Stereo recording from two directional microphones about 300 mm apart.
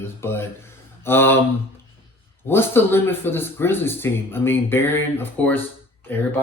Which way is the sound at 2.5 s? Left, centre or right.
Centre.